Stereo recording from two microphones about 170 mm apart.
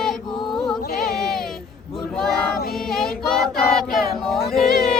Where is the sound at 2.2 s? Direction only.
Centre (ahead or behind).